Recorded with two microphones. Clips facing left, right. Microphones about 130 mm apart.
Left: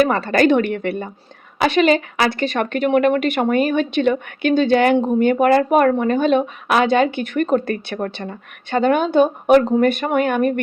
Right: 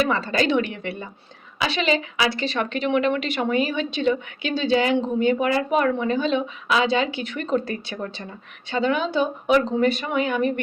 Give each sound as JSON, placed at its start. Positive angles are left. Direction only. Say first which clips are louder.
{"t": 0.0, "sound": "a woman's voice", "louder": "left 6 dB", "side_deg": 60}